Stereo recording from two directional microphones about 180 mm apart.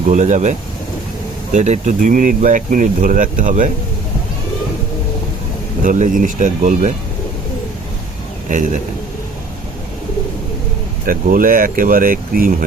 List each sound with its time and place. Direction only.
0.0 s speech: 45° right (ahead or behind)
1.5 s speech: 40° right (ahead or behind)
5.8 s speech: 50° right (ahead or behind)
8.4 s speech: 45° right (ahead or behind)
11.0 s speech: 50° right (ahead or behind)